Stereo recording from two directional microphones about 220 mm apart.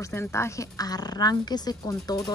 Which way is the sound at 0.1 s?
10° left (ahead or behind).